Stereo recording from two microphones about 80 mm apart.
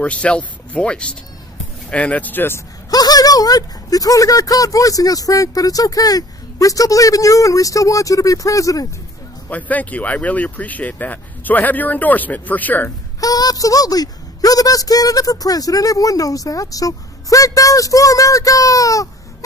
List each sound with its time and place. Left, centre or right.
0.0 s speech: centre
2.9 s speech: left
9.5 s speech: centre
13.2 s speech: left